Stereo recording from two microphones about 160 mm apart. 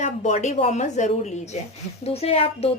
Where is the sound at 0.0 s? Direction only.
45° left (ahead or behind).